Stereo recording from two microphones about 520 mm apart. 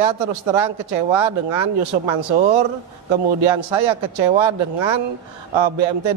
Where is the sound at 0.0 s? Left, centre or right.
Right.